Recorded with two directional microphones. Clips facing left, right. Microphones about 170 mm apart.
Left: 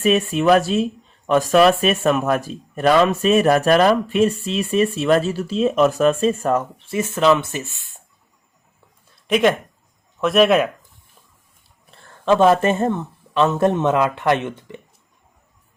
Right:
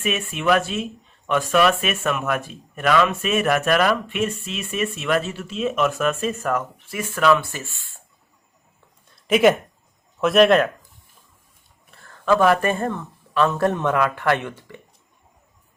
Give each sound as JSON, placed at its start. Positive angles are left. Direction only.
{"t": 0.0, "sound": "speech", "side_deg": 35}
{"t": 9.2, "sound": "a man's voice", "side_deg": 0}
{"t": 11.9, "sound": "speech", "side_deg": 25}